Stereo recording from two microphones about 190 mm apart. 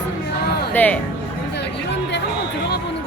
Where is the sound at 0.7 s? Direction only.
10° left (ahead or behind).